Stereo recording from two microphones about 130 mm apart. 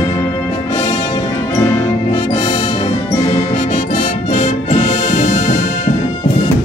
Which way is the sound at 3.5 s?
60° left (ahead or behind).